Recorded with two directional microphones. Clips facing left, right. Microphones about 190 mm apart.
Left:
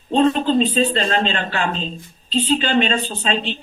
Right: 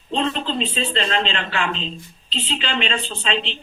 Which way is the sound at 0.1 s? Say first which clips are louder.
Left 7 dB; 45° left (ahead or behind).